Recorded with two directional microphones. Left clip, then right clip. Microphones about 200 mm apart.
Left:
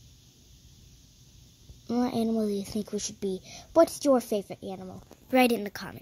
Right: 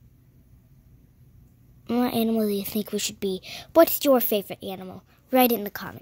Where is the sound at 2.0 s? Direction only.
25° right (ahead or behind).